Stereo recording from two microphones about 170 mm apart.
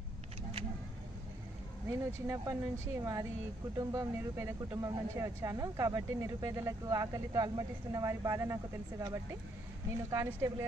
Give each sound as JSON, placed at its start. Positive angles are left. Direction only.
{"t": 1.9, "sound": "speech", "side_deg": -20}